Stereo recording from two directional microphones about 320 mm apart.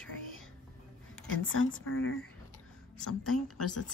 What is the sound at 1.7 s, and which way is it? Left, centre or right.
A woman's voice, left.